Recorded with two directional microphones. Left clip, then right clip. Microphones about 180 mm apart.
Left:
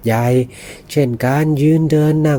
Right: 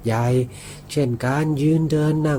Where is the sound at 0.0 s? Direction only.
40° left (ahead or behind).